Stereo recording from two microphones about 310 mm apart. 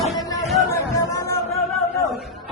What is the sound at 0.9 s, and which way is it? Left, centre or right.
Chatter, centre.